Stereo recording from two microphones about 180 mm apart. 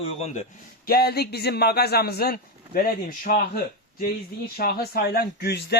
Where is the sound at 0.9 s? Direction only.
60° left (ahead or behind).